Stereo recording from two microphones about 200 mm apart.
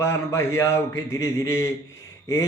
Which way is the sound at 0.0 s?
15° left (ahead or behind).